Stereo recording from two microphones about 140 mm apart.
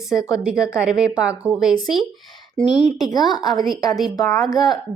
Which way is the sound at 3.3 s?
30° left (ahead or behind).